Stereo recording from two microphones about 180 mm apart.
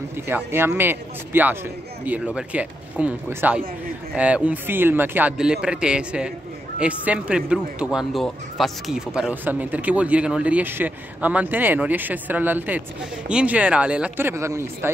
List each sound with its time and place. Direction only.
0.3 s speech: 10° right (ahead or behind)